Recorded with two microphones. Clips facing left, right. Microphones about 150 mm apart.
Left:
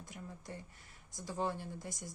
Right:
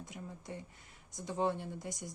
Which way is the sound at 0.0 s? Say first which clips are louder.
Right 2 dB; 20° right (ahead or behind).